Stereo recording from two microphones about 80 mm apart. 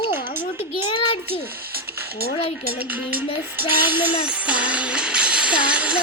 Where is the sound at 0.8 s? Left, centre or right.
Left.